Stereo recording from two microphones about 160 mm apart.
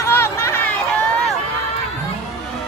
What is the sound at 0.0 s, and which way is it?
Chatter, 15° left (ahead or behind).